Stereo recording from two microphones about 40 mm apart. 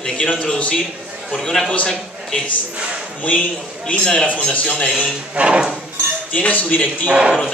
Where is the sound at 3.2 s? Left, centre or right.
Left.